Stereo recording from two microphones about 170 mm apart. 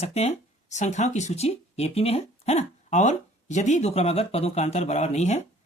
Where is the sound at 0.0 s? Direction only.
40° left (ahead or behind).